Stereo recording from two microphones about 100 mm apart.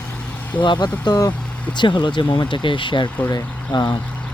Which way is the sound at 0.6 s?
50° left (ahead or behind).